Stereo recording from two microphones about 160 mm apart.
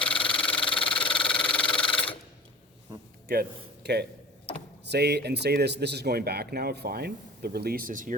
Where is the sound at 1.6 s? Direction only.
30° left (ahead or behind).